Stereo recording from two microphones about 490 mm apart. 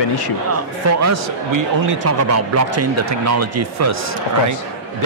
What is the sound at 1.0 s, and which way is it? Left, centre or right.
Speech, right.